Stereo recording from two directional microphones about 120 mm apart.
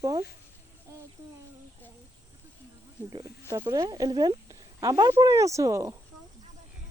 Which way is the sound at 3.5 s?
25° right (ahead or behind).